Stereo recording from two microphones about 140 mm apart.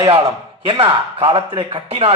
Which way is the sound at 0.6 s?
40° right (ahead or behind).